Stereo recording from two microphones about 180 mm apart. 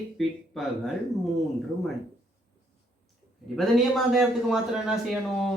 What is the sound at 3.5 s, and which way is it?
A man's voice, centre (ahead or behind).